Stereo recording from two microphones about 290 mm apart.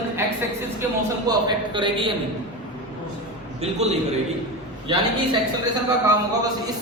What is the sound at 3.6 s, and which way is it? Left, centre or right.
Speech, right.